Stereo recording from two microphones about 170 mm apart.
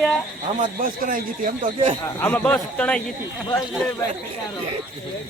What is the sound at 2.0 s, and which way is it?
Speech, 10° left (ahead or behind).